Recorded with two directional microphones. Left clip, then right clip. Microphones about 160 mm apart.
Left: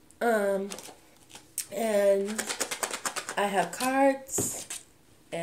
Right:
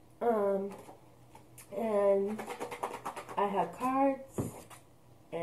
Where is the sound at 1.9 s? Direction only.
20° left (ahead or behind).